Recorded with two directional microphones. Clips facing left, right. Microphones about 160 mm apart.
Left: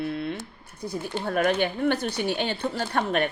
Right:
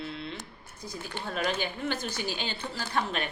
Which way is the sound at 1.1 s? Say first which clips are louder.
Left 8 dB; 50° left (ahead or behind).